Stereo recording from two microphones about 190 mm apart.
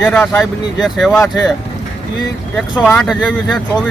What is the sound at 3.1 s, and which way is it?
Speech, 5° right (ahead or behind).